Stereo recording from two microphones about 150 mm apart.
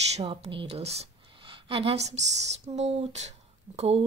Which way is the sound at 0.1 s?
40° right (ahead or behind).